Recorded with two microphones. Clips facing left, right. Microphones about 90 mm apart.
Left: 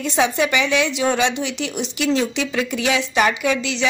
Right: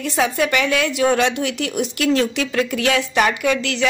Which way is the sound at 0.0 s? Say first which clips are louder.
Even; centre (ahead or behind).